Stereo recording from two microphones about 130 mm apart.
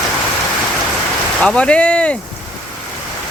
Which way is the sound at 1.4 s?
10° left (ahead or behind).